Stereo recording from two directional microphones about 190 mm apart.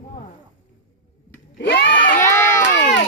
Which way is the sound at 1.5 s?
65° left (ahead or behind).